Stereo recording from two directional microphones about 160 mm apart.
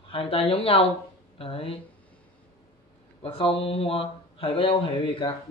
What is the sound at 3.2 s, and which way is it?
Speech, 35° left (ahead or behind).